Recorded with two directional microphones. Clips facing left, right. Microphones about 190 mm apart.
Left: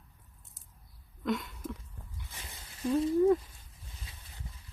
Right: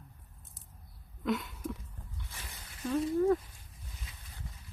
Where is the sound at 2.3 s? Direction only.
25° left (ahead or behind).